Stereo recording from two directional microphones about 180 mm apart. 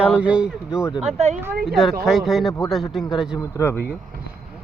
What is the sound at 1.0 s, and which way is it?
Speech, 35° right (ahead or behind).